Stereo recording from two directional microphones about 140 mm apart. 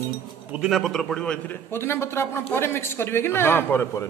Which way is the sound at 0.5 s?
Centre (ahead or behind).